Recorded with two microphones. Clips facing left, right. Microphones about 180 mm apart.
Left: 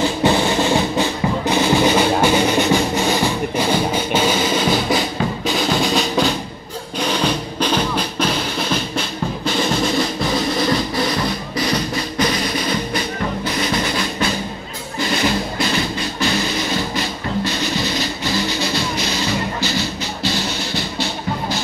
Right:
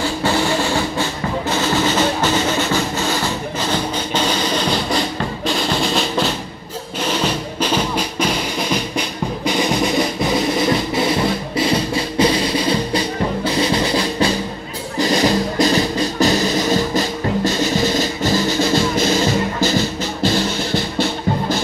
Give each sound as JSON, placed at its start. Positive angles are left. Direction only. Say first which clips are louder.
{"t": 0.0, "sound": "music", "louder": "left 2 dB", "side_deg": 20}
{"t": 7.0, "sound": "drum", "louder": "left 1 dB", "side_deg": -5}
{"t": 13.6, "sound": "music", "louder": "right 4 dB", "side_deg": -30}